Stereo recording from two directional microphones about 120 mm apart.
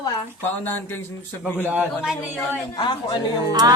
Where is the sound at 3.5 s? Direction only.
35° right (ahead or behind).